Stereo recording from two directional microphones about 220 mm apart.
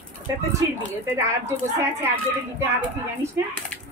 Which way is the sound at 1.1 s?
10° right (ahead or behind).